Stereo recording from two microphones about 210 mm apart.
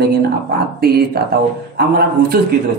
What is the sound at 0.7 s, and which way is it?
Speech, 45° right (ahead or behind).